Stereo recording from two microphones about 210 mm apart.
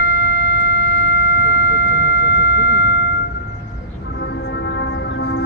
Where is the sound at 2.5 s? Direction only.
50° left (ahead or behind).